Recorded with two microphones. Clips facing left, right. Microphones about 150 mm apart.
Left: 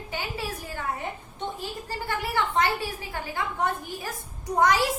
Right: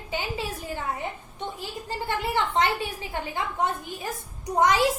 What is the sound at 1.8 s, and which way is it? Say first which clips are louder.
A woman's voice: right 3 dB; 20° right (ahead or behind).